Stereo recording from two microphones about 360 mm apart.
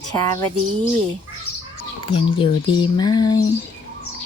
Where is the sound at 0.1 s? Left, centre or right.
Centre.